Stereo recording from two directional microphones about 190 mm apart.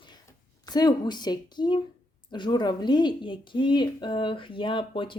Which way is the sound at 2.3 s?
25° left (ahead or behind).